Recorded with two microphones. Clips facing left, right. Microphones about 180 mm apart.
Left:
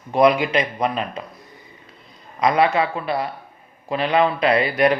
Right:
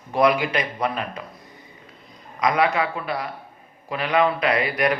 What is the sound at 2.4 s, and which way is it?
Speech, 30° left (ahead or behind).